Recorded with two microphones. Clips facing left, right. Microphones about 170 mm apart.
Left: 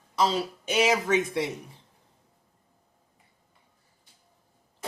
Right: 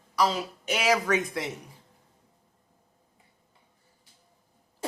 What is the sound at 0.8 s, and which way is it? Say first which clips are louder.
Speech: left 2 dB; 20° left (ahead or behind).